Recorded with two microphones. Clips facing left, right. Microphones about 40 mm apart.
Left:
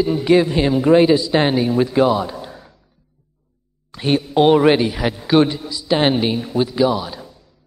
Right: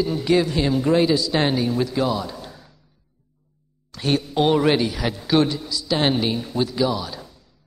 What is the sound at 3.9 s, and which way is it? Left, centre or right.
A woman's voice, centre.